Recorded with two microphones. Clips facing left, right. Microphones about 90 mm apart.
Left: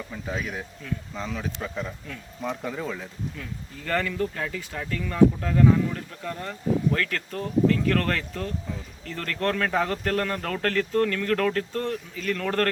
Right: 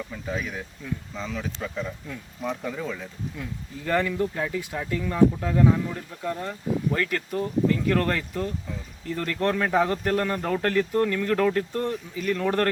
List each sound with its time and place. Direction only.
0.3 s speech: 5° left (ahead or behind)
3.3 s speech: 15° right (ahead or behind)